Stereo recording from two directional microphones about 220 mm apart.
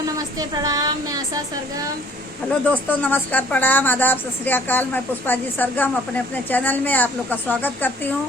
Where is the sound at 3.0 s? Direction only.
5° left (ahead or behind).